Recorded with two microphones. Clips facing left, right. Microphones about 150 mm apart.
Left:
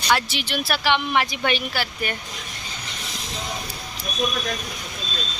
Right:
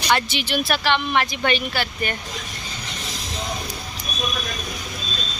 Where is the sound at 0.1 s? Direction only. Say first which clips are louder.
Right 1 dB; centre (ahead or behind).